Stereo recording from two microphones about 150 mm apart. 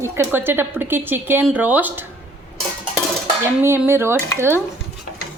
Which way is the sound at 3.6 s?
15° right (ahead or behind).